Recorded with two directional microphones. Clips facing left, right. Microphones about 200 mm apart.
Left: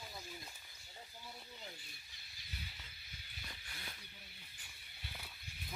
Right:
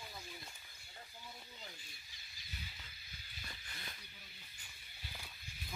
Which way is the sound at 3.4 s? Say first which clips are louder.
Even; 5° left (ahead or behind).